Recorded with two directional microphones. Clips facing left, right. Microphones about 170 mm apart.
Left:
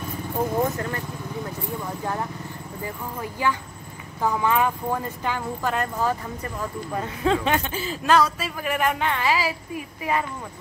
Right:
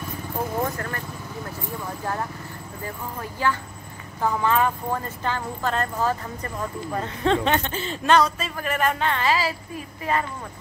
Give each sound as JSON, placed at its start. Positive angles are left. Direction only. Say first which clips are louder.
{"t": 0.7, "sound": "speech", "louder": "left 2 dB", "side_deg": 20}
{"t": 2.8, "sound": "speech", "louder": "left 1 dB", "side_deg": 15}